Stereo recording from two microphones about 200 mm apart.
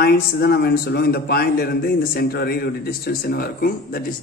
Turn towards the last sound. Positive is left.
turn(degrees=50)  # may be behind; listen again after turning